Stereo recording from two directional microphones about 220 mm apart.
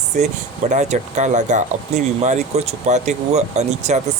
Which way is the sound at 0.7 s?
30° right (ahead or behind).